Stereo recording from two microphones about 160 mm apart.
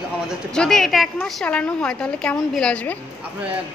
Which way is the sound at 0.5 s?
5° left (ahead or behind).